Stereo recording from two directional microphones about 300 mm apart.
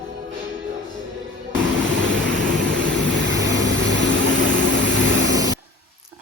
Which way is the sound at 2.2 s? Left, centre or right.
Right.